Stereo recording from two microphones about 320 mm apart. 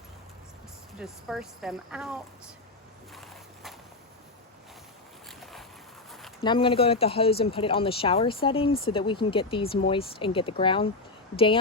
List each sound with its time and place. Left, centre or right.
0.9 s speech: centre
3.2 s walk: centre
5.4 s boat: centre
6.4 s speech: centre